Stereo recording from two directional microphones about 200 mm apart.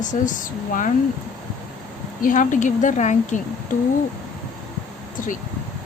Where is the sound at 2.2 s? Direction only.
40° left (ahead or behind).